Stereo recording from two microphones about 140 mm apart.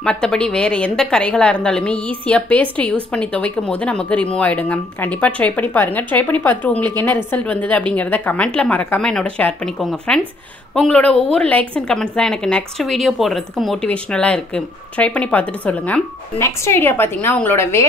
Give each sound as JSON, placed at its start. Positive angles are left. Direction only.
{"t": 0.0, "sound": "a woman's voice", "side_deg": 5}